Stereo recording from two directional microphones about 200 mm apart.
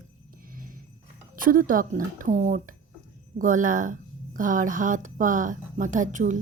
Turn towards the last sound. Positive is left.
turn(degrees=-40)  # may be behind; listen again after turning